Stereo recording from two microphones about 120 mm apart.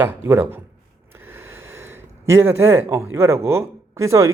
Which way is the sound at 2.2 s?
20° right (ahead or behind).